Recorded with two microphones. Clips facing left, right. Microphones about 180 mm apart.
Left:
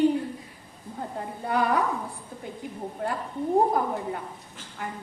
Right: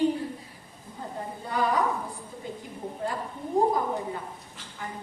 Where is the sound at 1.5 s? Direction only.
60° left (ahead or behind).